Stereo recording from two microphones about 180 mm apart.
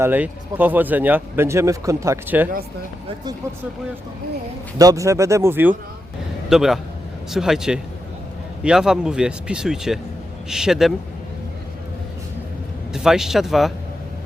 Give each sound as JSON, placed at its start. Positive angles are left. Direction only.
{"t": 0.0, "sound": "speech", "side_deg": -10}
{"t": 4.8, "sound": "speech", "side_deg": -20}
{"t": 12.9, "sound": "speech", "side_deg": -5}